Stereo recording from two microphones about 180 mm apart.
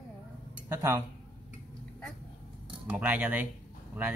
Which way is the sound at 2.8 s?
10° right (ahead or behind).